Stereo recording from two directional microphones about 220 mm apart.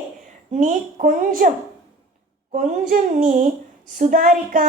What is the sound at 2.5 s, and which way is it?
A woman's voice, 40° right (ahead or behind).